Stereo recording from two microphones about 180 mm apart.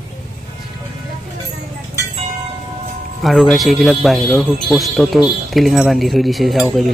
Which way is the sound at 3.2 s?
Centre (ahead or behind).